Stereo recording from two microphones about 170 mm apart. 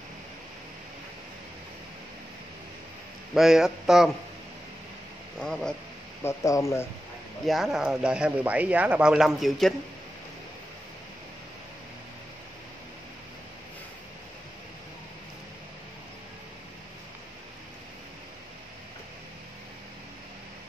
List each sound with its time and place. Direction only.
3.3 s speech: 5° right (ahead or behind)
5.4 s speech: 5° left (ahead or behind)
6.2 s speech: 20° left (ahead or behind)
7.4 s speech: centre (ahead or behind)